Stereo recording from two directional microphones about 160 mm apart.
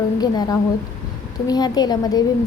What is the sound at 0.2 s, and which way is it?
A woman's voice, 25° left (ahead or behind).